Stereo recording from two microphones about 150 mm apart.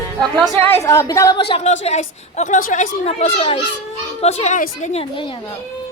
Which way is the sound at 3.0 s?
45° left (ahead or behind).